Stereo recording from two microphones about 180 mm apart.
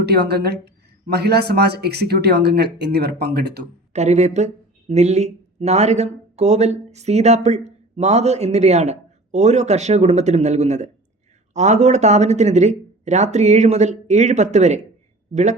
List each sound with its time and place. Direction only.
0.0 s speech: 65° right (ahead or behind)
3.9 s speech: 40° right (ahead or behind)